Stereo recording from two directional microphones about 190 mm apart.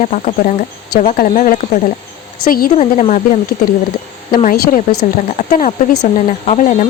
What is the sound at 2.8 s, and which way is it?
Speech, 40° left (ahead or behind).